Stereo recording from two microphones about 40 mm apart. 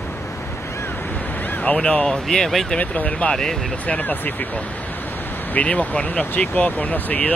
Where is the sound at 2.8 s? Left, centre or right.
Left.